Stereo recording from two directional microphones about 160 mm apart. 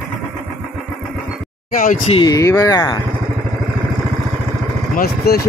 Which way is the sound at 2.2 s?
20° left (ahead or behind).